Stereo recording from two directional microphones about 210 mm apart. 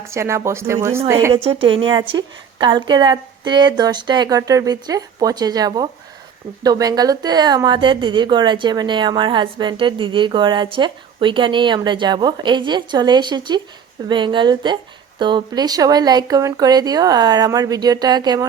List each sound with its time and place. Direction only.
0.1 s speech: 15° right (ahead or behind)
1.5 s a woman's voice: 25° right (ahead or behind)